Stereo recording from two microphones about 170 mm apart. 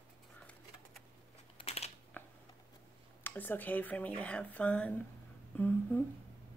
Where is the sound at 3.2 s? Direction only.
10° left (ahead or behind).